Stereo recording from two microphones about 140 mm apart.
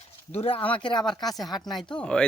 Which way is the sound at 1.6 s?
30° left (ahead or behind).